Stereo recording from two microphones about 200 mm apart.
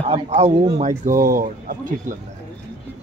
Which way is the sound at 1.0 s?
45° right (ahead or behind).